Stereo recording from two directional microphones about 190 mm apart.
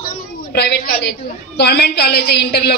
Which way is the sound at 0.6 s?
60° left (ahead or behind).